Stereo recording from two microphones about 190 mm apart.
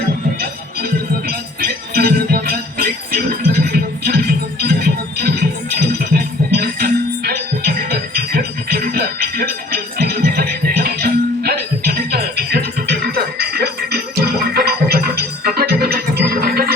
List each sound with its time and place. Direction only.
1.3 s music: 55° right (ahead or behind)